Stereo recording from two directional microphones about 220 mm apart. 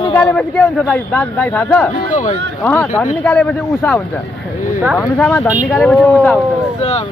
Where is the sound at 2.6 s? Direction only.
10° left (ahead or behind).